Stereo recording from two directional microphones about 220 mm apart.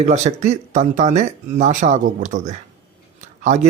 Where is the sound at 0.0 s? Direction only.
30° right (ahead or behind).